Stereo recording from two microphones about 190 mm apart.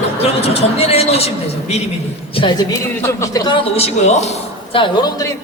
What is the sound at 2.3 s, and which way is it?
Speech, 25° left (ahead or behind).